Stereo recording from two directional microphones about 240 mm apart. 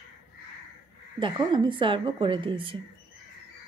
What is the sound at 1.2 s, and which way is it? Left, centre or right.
A woman's voice, centre.